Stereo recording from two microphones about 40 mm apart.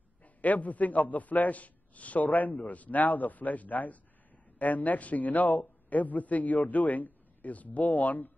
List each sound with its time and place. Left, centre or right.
0.2 s a man's voice: left